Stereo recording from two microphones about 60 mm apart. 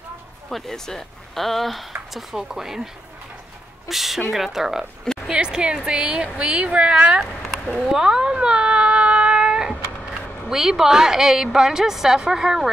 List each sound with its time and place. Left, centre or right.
0.5 s speech: centre
3.9 s speech: centre
5.0 s a sound: centre
5.3 s speech: centre
7.8 s a sound: centre
10.5 s speech: centre